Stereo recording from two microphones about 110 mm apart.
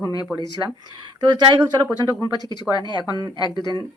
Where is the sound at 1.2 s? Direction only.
40° right (ahead or behind).